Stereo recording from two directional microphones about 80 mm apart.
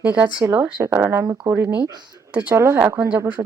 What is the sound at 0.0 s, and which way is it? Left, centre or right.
A woman's voice, centre.